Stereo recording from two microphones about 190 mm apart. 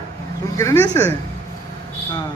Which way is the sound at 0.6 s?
15° left (ahead or behind).